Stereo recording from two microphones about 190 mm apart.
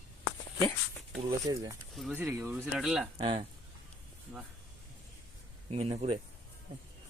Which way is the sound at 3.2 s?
30° right (ahead or behind).